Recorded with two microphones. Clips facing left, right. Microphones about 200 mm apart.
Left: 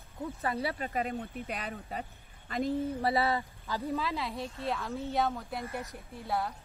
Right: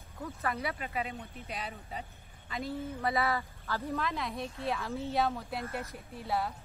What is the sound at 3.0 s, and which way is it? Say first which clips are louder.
Speech: right 2 dB; 30° left (ahead or behind).